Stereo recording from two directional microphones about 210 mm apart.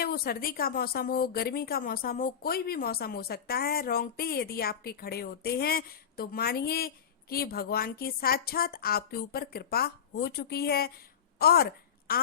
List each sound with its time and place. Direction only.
0.0 s a woman's voice: 45° left (ahead or behind)